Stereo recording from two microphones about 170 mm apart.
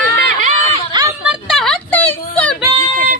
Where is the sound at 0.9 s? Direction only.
25° right (ahead or behind).